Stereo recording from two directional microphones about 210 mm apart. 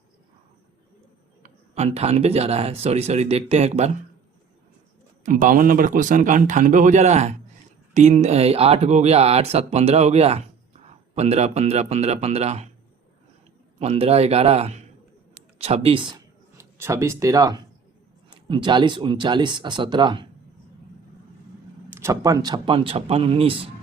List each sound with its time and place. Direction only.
1.4 s speech: 30° right (ahead or behind)
5.2 s a man's voice: 40° right (ahead or behind)
13.7 s speech: 30° right (ahead or behind)
21.8 s speech: 10° right (ahead or behind)